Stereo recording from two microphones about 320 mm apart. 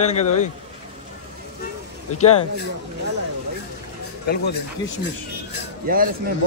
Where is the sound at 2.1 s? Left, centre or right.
Left.